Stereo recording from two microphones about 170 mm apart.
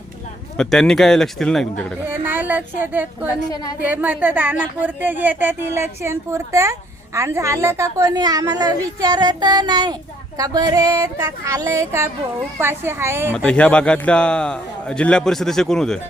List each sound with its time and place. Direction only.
0.5 s a man's voice: 5° left (ahead or behind)
2.0 s speech: 10° right (ahead or behind)
13.3 s a man's voice: 5° left (ahead or behind)